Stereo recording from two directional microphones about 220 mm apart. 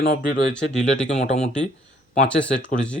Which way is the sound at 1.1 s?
30° left (ahead or behind).